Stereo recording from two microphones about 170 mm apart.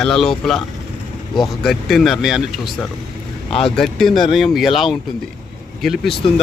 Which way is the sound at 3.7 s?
Centre (ahead or behind).